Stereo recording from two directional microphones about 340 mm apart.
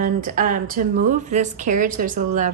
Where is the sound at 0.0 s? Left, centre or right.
Right.